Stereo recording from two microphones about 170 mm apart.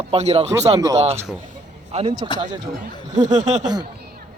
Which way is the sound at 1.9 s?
40° right (ahead or behind).